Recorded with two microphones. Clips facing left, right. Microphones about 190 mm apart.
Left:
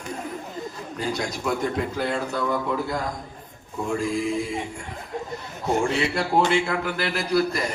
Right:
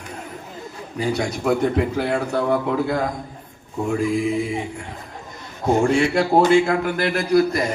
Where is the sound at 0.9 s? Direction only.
60° right (ahead or behind).